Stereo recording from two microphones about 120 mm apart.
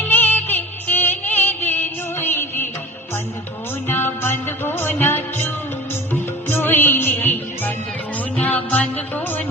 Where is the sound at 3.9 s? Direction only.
15° left (ahead or behind).